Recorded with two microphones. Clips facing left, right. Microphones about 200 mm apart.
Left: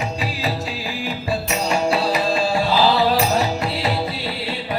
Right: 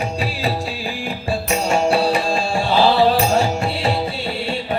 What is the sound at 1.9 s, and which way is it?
Music, 30° right (ahead or behind).